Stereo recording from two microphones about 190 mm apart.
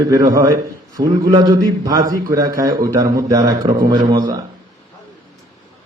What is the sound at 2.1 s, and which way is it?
Mantra, 20° right (ahead or behind).